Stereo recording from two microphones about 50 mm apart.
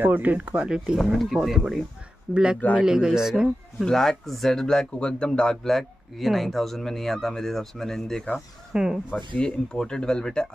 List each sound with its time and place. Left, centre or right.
0.0 s speech: right
0.7 s speech: centre
0.9 s speech: centre
3.8 s speech: centre
8.7 s speech: centre
9.1 s speech: centre